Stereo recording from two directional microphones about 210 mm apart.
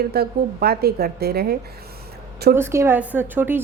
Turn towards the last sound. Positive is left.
turn(degrees=-10)  # may be behind; listen again after turning